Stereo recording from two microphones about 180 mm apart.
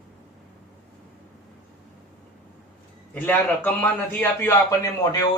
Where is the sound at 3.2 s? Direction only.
10° left (ahead or behind).